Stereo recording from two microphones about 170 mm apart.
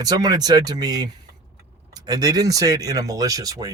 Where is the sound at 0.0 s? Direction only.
25° right (ahead or behind).